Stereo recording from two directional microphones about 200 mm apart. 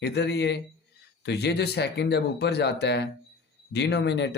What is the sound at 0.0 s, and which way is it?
Speech, 55° left (ahead or behind).